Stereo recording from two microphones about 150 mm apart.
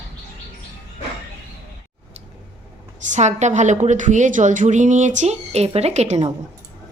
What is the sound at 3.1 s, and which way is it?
A woman's voice, 50° right (ahead or behind).